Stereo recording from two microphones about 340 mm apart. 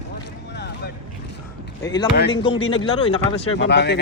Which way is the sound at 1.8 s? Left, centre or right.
Centre.